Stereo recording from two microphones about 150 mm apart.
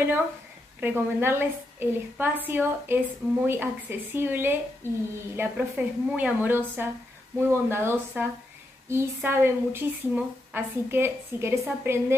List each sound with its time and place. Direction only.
0.7 s speech: 15° right (ahead or behind)